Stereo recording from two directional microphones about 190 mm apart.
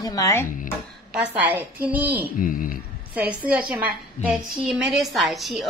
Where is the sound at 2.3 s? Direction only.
45° left (ahead or behind).